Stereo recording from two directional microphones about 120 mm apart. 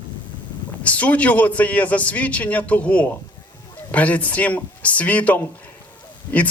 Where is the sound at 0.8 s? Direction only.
10° left (ahead or behind).